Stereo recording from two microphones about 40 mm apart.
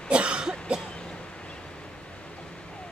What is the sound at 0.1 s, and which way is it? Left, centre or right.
Cough, right.